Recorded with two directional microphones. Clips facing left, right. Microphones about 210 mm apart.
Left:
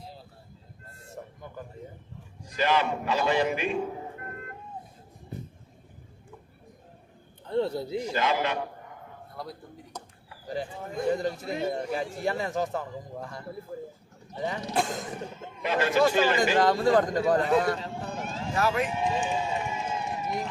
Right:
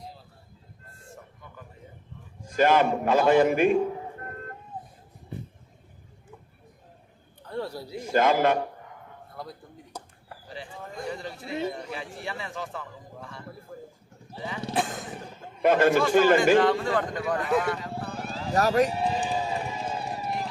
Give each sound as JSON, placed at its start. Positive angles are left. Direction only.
{"t": 1.0, "sound": "a sound", "side_deg": 40}
{"t": 2.4, "sound": "a man's voice", "side_deg": -50}
{"t": 7.4, "sound": "a sound", "side_deg": 25}
{"t": 8.1, "sound": "a man's voice", "side_deg": -50}
{"t": 9.3, "sound": "a man's voice", "side_deg": 0}
{"t": 11.1, "sound": "a man's voice", "side_deg": 45}
{"t": 14.7, "sound": "vehicle", "side_deg": 0}
{"t": 15.6, "sound": "a man's voice", "side_deg": -50}
{"t": 16.6, "sound": "a man's voice", "side_deg": 40}
{"t": 17.9, "sound": "a sound", "side_deg": -35}